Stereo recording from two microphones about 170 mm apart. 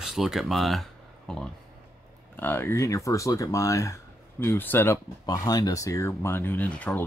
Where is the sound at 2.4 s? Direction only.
15° left (ahead or behind).